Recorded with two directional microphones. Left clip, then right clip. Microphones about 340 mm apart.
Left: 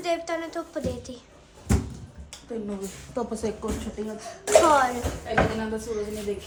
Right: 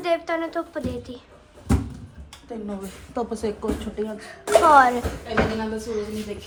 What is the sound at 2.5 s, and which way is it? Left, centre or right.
Speech, centre.